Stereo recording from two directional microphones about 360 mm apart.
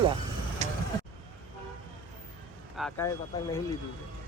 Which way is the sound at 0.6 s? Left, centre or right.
Centre.